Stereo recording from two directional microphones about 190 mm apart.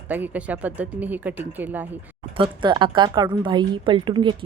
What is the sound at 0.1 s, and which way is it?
Speech, 10° right (ahead or behind).